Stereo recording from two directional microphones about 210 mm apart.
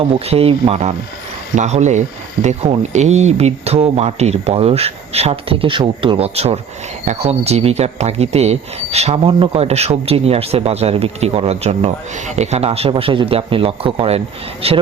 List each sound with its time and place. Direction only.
0.0 s speech: 30° right (ahead or behind)